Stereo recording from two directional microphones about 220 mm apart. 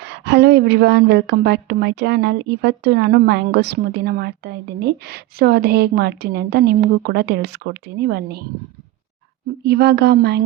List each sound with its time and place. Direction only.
0.0 s a woman's voice: 50° right (ahead or behind)
9.6 s a woman's voice: 50° right (ahead or behind)